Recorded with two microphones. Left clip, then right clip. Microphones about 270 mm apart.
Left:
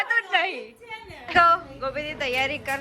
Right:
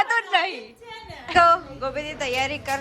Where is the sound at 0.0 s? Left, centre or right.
Centre.